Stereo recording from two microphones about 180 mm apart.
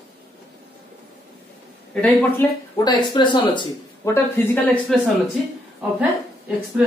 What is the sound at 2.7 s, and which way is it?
Speech, 25° left (ahead or behind).